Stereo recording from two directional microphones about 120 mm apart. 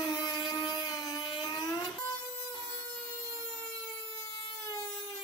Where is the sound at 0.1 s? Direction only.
35° left (ahead or behind).